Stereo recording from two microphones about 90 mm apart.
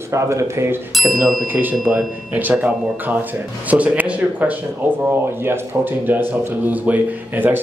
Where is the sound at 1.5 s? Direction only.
20° right (ahead or behind).